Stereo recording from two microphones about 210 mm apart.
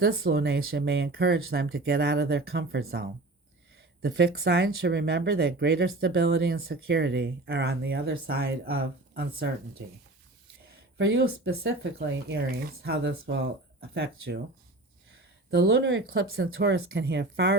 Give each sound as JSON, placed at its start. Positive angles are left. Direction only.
{"t": 0.0, "sound": "speech", "side_deg": -45}
{"t": 4.0, "sound": "speech", "side_deg": -50}
{"t": 10.9, "sound": "speech", "side_deg": -55}
{"t": 15.4, "sound": "speech", "side_deg": -50}
{"t": 16.6, "sound": "speech", "side_deg": -50}